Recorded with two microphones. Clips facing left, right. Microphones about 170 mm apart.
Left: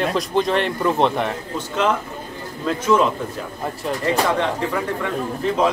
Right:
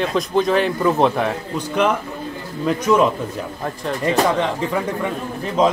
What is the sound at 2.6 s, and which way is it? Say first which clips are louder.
Speech: right 1 dB; 15° right (ahead or behind).